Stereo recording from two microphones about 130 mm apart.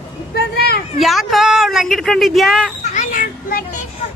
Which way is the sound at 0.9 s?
Centre (ahead or behind).